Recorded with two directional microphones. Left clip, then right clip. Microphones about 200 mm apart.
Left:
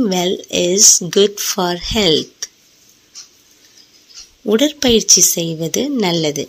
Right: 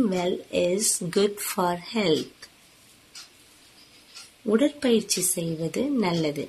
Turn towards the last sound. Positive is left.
turn(degrees=35)  # may be behind; listen again after turning